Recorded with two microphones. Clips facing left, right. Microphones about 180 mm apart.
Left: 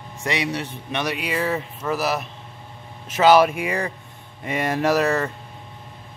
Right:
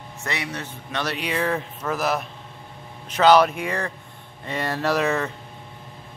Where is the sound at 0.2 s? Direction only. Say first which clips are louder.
Left 5 dB; 15° left (ahead or behind).